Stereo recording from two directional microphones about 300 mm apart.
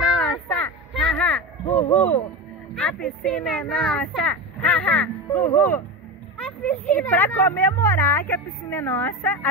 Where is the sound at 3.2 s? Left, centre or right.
Centre.